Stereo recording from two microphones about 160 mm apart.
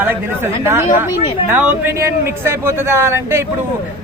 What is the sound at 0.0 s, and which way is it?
Speech, 15° right (ahead or behind).